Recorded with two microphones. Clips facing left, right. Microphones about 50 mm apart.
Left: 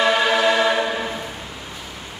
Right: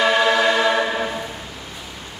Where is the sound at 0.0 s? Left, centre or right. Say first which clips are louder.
Right 1 dB; centre.